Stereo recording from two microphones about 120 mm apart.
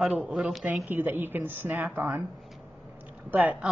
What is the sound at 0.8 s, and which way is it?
A woman's voice, 15° right (ahead or behind).